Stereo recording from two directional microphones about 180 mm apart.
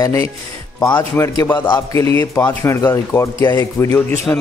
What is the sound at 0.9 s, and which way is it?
Speech, 15° left (ahead or behind).